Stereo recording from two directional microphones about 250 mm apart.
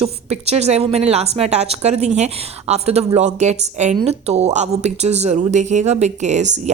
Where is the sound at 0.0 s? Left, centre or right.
Right.